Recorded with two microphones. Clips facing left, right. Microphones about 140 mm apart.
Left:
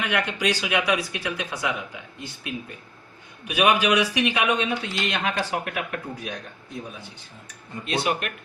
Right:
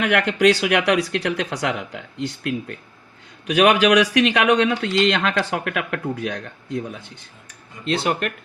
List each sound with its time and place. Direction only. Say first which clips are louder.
0.0 s speech: right 8 dB; 70° right (ahead or behind)